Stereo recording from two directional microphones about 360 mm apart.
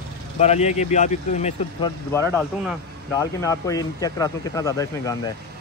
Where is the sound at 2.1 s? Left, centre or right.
Centre.